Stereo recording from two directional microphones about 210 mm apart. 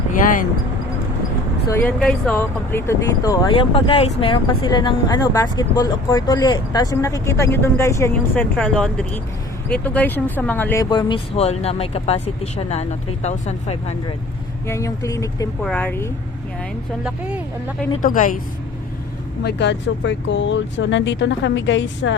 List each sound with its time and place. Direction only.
1.7 s speech: 5° left (ahead or behind); by 13.9 s 30° left (ahead or behind)
14.7 s speech: 15° left (ahead or behind)
17.0 s speech: 5° right (ahead or behind)
18.0 s a woman's voice: 40° left (ahead or behind)
19.4 s speech: 55° left (ahead or behind)